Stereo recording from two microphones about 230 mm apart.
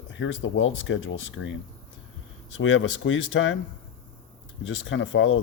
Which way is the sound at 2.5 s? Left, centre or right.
Left.